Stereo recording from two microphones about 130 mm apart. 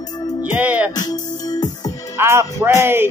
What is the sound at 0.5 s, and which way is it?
Music, 10° right (ahead or behind).